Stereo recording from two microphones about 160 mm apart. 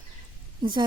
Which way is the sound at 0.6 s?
30° right (ahead or behind).